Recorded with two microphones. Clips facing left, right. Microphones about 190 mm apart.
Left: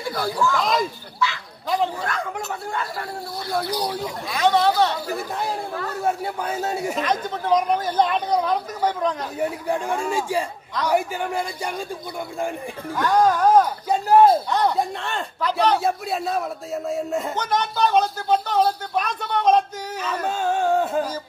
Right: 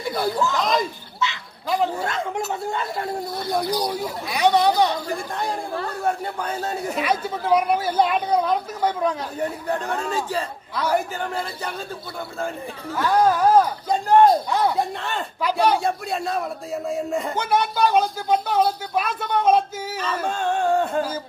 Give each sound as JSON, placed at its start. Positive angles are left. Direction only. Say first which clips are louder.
{"t": 0.1, "sound": "speech", "louder": "even", "side_deg": -20}
{"t": 0.6, "sound": "a man's voice", "louder": "even", "side_deg": 0}
{"t": 1.2, "sound": "bow-wow", "louder": "left 1 dB", "side_deg": -20}
{"t": 1.7, "sound": "a man's voice", "louder": "right 1 dB", "side_deg": 0}
{"t": 2.0, "sound": "speech", "louder": "right 2 dB", "side_deg": -25}
{"t": 5.0, "sound": "a man's voice", "louder": "even", "side_deg": 5}
{"t": 7.0, "sound": "speech", "louder": "even", "side_deg": -10}
{"t": 9.4, "sound": "a man's voice", "louder": "left 2 dB", "side_deg": 10}
{"t": 12.9, "sound": "speech", "louder": "even", "side_deg": -5}
{"t": 13.8, "sound": "a man's voice", "louder": "left 1 dB", "side_deg": 5}
{"t": 15.8, "sound": "a man's voice", "louder": "left 1 dB", "side_deg": 0}
{"t": 20.2, "sound": "a man's voice", "louder": "left 1 dB", "side_deg": 5}